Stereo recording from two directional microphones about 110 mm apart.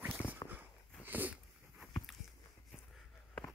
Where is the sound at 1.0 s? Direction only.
15° right (ahead or behind).